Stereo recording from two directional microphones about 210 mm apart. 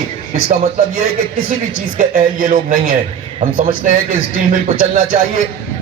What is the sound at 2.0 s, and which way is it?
A man's voice, 40° right (ahead or behind).